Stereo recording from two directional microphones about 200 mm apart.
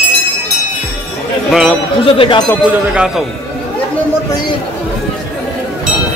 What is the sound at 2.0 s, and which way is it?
Speech, 25° left (ahead or behind).